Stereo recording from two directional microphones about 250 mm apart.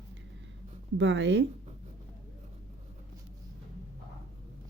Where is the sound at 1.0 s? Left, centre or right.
Right.